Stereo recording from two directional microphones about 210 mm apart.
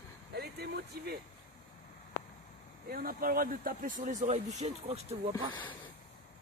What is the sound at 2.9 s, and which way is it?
Speech, 45° right (ahead or behind).